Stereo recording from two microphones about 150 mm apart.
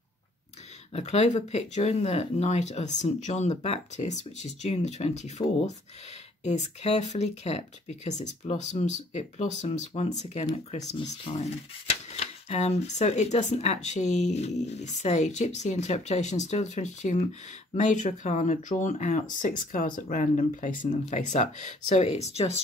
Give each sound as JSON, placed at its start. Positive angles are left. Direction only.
{"t": 0.9, "sound": "speech", "side_deg": 50}
{"t": 6.4, "sound": "speech", "side_deg": 50}
{"t": 11.0, "sound": "speech", "side_deg": 35}
{"t": 11.9, "sound": "speech", "side_deg": 45}